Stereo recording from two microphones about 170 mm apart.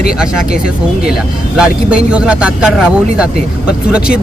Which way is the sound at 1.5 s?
5° right (ahead or behind).